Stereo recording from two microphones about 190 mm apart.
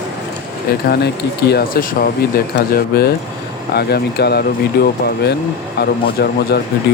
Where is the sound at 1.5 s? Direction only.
55° left (ahead or behind).